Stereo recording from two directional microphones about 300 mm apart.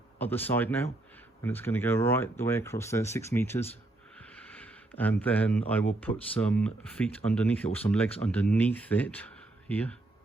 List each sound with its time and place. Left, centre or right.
0.2 s speech: centre
4.2 s a sound: centre
6.0 s speech: centre